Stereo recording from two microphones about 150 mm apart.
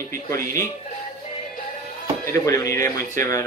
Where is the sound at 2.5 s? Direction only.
20° left (ahead or behind).